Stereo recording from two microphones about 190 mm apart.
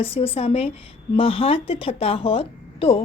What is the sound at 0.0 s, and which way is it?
A woman's voice, 30° left (ahead or behind).